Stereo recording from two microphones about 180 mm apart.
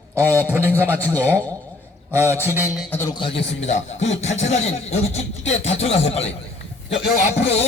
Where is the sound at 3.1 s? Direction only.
30° left (ahead or behind).